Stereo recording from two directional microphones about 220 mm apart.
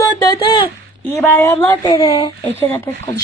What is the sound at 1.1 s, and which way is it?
Speech, 10° left (ahead or behind).